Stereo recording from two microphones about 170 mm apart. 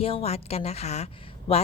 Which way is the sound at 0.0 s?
35° left (ahead or behind).